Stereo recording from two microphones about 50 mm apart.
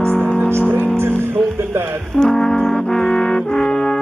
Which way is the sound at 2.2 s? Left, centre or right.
Centre.